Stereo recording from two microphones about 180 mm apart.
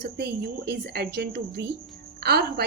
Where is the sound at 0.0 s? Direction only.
65° right (ahead or behind).